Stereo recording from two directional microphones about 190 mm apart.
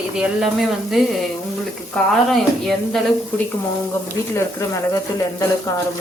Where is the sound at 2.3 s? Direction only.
Centre (ahead or behind).